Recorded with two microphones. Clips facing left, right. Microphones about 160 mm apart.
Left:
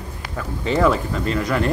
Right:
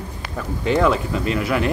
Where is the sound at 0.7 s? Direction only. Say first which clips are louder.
Even; 5° right (ahead or behind).